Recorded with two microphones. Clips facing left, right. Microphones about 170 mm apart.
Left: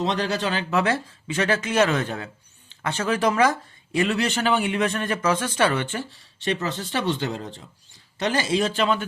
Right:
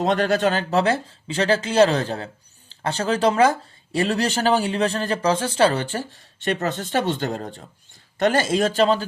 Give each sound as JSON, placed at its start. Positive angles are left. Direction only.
{"t": 0.0, "sound": "speech", "side_deg": -50}